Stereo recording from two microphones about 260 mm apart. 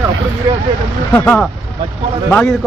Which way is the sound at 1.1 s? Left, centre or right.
Centre.